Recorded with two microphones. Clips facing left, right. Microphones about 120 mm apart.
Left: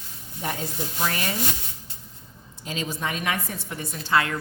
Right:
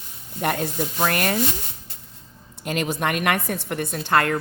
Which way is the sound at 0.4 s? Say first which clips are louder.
Right 6 dB; 65° right (ahead or behind).